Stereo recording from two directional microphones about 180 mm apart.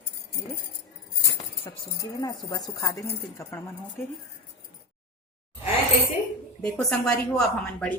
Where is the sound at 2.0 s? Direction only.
20° left (ahead or behind).